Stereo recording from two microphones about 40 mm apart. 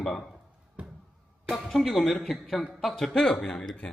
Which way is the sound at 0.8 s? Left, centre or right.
Right.